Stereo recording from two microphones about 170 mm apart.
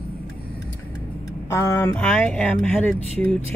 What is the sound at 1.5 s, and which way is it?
Speech, 20° left (ahead or behind).